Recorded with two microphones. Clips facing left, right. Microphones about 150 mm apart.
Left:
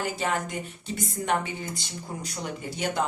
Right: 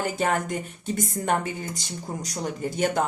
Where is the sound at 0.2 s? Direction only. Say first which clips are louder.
Right 4 dB; 50° right (ahead or behind).